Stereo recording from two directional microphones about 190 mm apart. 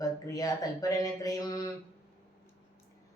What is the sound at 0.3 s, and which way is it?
Speech, 20° left (ahead or behind).